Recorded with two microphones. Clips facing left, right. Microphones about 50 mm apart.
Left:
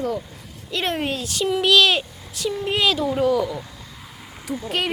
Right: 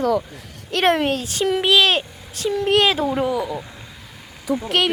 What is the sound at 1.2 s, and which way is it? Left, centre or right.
Speech, right.